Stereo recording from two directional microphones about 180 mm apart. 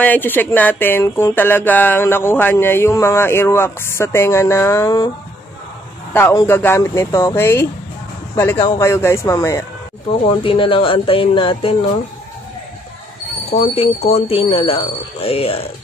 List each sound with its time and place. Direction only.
0.0 s speech: 10° left (ahead or behind)
6.1 s speech: 10° left (ahead or behind)
10.4 s speech: 30° left (ahead or behind)
13.5 s speech: 35° left (ahead or behind)